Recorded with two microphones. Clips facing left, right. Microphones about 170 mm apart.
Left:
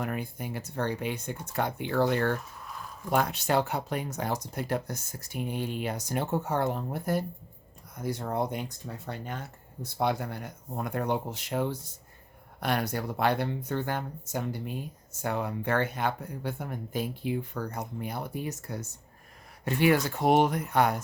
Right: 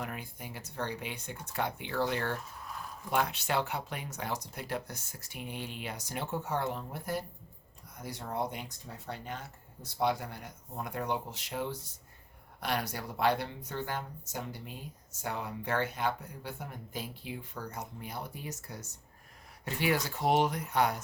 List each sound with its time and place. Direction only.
0.0 s speech: 50° left (ahead or behind)